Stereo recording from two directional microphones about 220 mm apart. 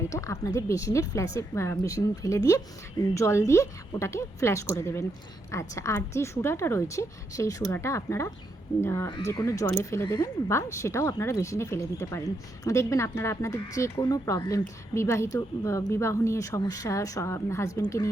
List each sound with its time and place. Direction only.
0.1 s speech: 15° left (ahead or behind)